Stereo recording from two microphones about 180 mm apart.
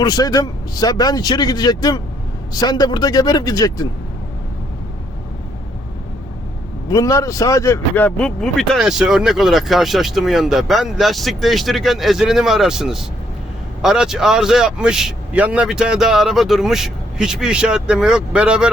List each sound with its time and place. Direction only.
0.0 s speech: 20° left (ahead or behind)
6.9 s speech: 20° left (ahead or behind); by 18.7 s 5° right (ahead or behind)